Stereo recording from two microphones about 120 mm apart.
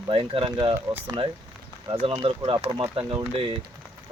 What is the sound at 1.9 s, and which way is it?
Speech, 50° right (ahead or behind).